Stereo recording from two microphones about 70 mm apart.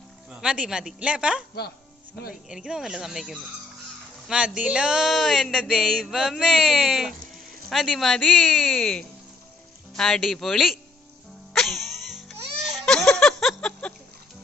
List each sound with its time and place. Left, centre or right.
0.3 s speech: centre
2.5 s speech: centre
11.5 s music: centre
12.8 s a sound: centre